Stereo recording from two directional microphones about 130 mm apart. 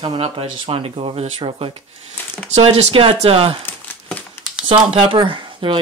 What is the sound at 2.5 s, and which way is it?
Speech, 55° right (ahead or behind).